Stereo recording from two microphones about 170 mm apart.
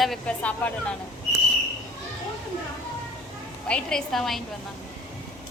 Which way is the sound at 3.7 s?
5° left (ahead or behind).